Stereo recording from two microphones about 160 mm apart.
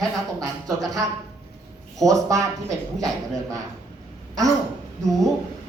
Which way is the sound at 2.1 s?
20° right (ahead or behind).